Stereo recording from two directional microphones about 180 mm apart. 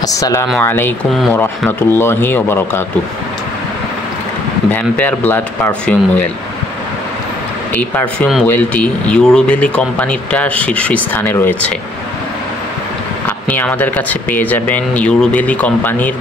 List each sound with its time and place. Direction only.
0.0 s speech: 20° left (ahead or behind)
4.6 s speech: 10° left (ahead or behind)
7.7 s speech: 10° left (ahead or behind)
13.5 s speech: 10° left (ahead or behind)